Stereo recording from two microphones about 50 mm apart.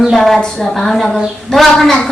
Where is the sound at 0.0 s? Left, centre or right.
Centre.